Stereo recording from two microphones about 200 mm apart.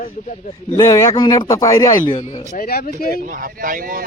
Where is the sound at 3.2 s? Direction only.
40° right (ahead or behind).